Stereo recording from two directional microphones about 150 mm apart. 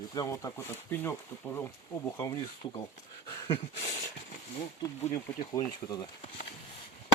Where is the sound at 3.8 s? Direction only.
45° left (ahead or behind).